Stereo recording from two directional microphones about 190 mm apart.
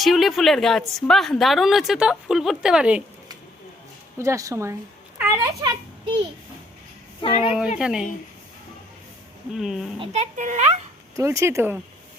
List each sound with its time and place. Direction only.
0.0 s a woman's voice: centre (ahead or behind)
4.2 s a child's voice: 15° right (ahead or behind)
7.2 s a woman's voice: 30° left (ahead or behind)
7.8 s a woman's voice: 5° right (ahead or behind)
9.5 s a woman's voice: centre (ahead or behind)
10.0 s a child's voice: 35° right (ahead or behind)
11.2 s speech: 15° right (ahead or behind)